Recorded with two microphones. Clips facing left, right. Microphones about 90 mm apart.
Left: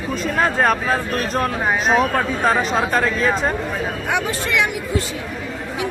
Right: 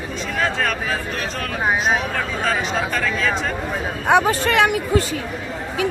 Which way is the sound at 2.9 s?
35° left (ahead or behind).